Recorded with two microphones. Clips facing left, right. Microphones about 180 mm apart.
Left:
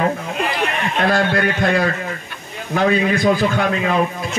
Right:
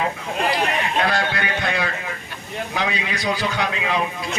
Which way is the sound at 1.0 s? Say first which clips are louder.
Left 6 dB; 50° left (ahead or behind).